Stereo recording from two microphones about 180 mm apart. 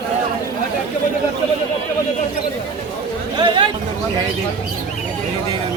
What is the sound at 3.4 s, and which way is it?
Speech, 25° right (ahead or behind).